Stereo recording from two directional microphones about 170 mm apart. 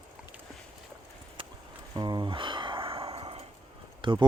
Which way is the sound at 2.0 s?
25° right (ahead or behind).